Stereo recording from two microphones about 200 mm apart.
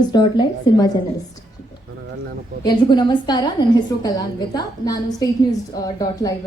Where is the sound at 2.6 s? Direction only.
20° left (ahead or behind).